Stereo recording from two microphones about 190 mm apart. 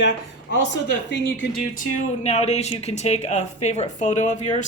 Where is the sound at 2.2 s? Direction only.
35° left (ahead or behind).